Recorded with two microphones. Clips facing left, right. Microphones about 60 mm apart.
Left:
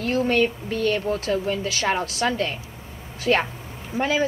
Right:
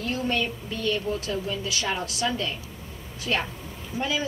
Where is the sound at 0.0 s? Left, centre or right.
Left.